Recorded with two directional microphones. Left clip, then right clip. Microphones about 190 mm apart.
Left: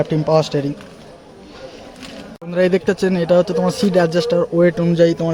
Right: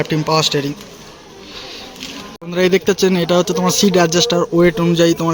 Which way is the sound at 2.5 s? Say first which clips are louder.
Right 2 dB; 10° left (ahead or behind).